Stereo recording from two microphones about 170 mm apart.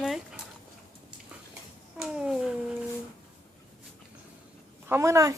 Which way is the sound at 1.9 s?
5° right (ahead or behind).